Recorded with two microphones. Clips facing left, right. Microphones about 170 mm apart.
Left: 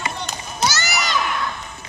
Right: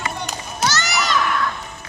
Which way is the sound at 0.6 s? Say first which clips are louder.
Right 1 dB; 5° left (ahead or behind).